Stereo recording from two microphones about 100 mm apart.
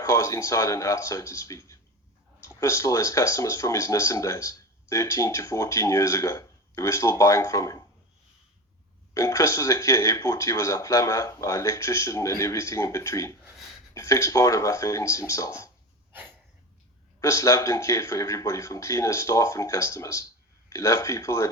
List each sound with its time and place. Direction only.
0.0 s speech: 30° left (ahead or behind)
9.1 s speech: 30° left (ahead or behind)
17.2 s speech: 30° left (ahead or behind)